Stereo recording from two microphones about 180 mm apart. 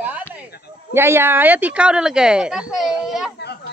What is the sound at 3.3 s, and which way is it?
Children playing, 65° left (ahead or behind).